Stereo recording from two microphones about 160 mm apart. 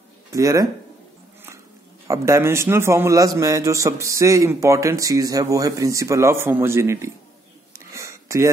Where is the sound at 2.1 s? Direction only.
15° right (ahead or behind).